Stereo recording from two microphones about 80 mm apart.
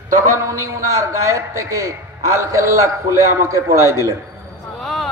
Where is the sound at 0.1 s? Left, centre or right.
Right.